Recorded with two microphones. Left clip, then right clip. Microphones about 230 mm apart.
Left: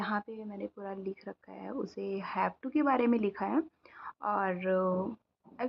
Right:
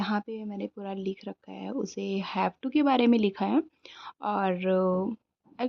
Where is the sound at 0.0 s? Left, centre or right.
Right.